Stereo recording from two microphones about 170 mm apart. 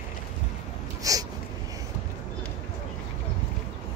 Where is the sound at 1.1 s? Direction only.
20° right (ahead or behind).